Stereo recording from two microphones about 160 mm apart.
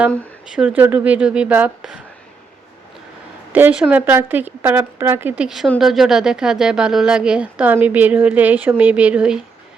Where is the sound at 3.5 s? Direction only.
10° right (ahead or behind).